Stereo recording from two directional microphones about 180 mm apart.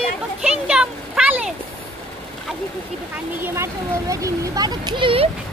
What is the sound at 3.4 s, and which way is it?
Speech, 15° right (ahead or behind).